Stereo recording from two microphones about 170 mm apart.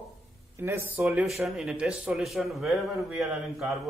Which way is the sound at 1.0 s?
Centre (ahead or behind).